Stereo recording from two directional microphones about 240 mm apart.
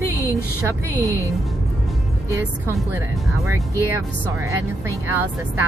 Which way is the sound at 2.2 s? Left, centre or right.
Centre.